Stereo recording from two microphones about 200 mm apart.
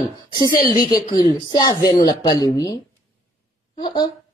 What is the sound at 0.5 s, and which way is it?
Speech, 45° left (ahead or behind).